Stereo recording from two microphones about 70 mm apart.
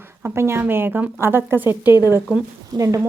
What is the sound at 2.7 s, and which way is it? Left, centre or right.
Speech, right.